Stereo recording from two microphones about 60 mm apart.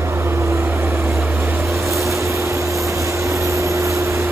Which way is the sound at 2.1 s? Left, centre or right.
Right.